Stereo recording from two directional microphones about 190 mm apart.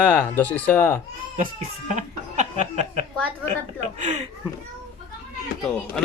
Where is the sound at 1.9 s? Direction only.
35° right (ahead or behind).